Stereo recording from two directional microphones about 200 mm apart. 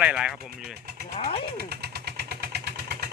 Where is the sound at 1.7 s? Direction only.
55° right (ahead or behind).